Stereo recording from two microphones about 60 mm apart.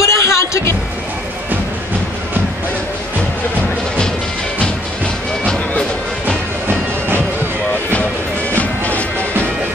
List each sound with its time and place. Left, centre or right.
0.0 s vehicle: left
5.4 s music: centre
8.5 s music: left